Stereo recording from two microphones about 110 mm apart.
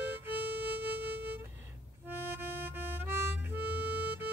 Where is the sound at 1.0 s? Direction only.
15° right (ahead or behind).